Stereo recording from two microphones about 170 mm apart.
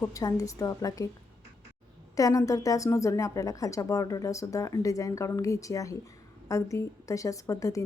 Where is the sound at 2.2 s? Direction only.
20° left (ahead or behind).